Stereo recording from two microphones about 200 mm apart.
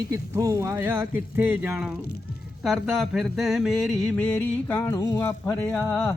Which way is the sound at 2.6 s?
Centre (ahead or behind).